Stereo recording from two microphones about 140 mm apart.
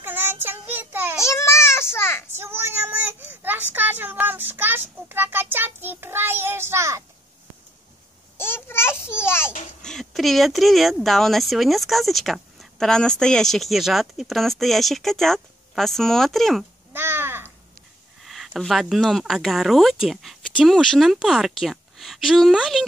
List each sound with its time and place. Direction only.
0.0 s child singing: 15° right (ahead or behind)
1.2 s a sound: 20° left (ahead or behind)
2.3 s child singing: 15° right (ahead or behind)
8.4 s a sound: 15° left (ahead or behind)
9.8 s speech: 5° left (ahead or behind)
16.9 s crow: 15° right (ahead or behind)
18.2 s speech: centre (ahead or behind)